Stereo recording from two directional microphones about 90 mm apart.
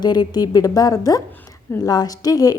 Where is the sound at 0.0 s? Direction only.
50° left (ahead or behind).